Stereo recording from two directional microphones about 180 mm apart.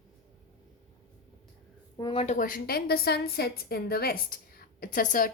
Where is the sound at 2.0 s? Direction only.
25° left (ahead or behind).